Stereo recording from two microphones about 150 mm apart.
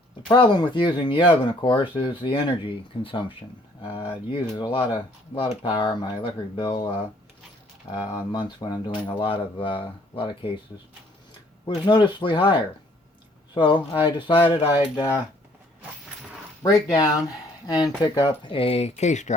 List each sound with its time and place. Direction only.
0.3 s speech: 30° left (ahead or behind)
7.9 s speech: 30° left (ahead or behind)
11.6 s speech: 35° left (ahead or behind)
14.0 s speech: 30° left (ahead or behind)
16.7 s speech: 25° left (ahead or behind); by 19.4 s 50° left (ahead or behind)